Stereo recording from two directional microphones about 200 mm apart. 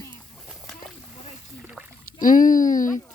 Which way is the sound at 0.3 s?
Centre (ahead or behind).